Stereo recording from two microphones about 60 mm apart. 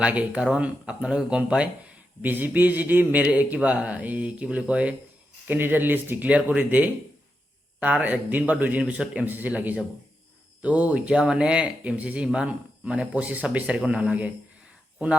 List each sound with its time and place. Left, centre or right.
0.0 s speech: right
2.2 s speech: right
5.5 s speech: right; by 11.7 s centre
11.8 s speech: right